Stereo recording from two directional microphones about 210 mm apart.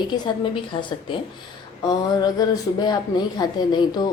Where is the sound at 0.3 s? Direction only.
20° left (ahead or behind).